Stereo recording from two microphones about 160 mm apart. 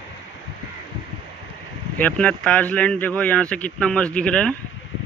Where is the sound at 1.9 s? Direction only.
10° left (ahead or behind).